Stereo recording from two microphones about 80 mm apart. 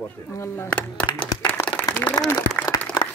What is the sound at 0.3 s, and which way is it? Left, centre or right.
Speech, left.